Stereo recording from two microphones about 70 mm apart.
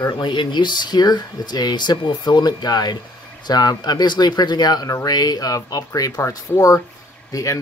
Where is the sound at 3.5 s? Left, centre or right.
Left.